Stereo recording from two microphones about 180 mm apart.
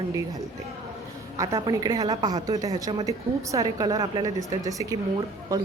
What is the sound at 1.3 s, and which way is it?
A woman's voice, 20° right (ahead or behind).